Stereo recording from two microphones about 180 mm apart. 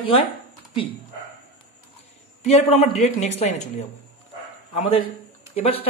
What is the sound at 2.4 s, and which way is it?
Speech, 40° left (ahead or behind).